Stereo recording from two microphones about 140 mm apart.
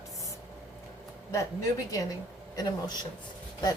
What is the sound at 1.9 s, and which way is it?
A woman's voice, 25° left (ahead or behind).